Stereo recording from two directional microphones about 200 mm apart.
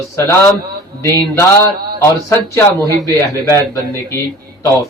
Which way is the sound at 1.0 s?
15° left (ahead or behind).